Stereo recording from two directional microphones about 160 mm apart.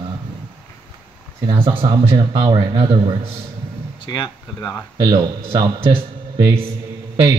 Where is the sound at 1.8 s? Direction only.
35° right (ahead or behind).